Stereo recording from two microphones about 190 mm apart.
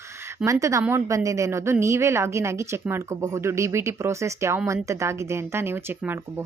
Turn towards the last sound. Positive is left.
turn(degrees=-15)  # may be behind; listen again after turning